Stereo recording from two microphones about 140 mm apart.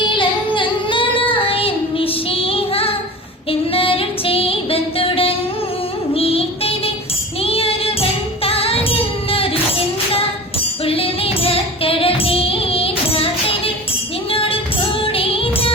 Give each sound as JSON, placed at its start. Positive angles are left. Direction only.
{"t": 0.1, "sound": "singing", "side_deg": 35}
{"t": 3.5, "sound": "music", "side_deg": 40}
{"t": 10.8, "sound": "music", "side_deg": 40}
{"t": 14.3, "sound": "music", "side_deg": 40}